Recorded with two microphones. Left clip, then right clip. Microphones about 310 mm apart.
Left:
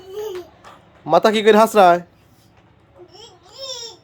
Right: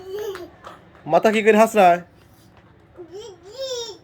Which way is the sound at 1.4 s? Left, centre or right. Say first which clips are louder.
Left 2 dB; left.